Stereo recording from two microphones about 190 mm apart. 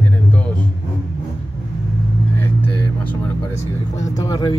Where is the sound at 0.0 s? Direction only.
10° left (ahead or behind).